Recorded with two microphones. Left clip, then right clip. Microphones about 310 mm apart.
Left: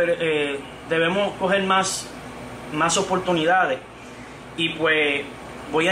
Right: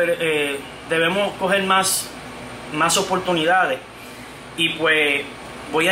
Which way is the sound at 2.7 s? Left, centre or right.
Centre.